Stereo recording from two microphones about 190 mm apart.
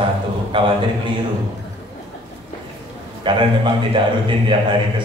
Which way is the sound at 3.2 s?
25° right (ahead or behind).